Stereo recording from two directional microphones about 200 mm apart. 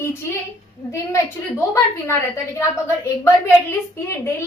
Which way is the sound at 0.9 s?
15° left (ahead or behind).